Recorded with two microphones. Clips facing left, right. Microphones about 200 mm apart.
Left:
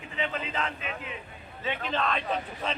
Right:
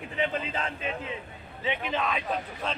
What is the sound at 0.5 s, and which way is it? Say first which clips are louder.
Speech: right 1 dB; 30° right (ahead or behind).